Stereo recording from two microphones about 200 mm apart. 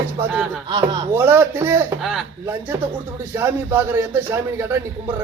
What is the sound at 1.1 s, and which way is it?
A man's voice, 10° right (ahead or behind).